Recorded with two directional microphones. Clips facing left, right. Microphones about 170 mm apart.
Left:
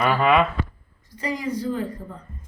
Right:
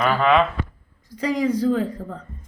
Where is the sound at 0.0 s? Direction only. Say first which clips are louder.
Right 1 dB; 5° left (ahead or behind).